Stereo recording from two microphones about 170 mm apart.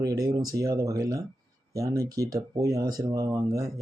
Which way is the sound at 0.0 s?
20° right (ahead or behind).